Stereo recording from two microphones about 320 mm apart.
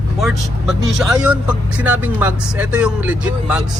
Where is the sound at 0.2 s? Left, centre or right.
Centre.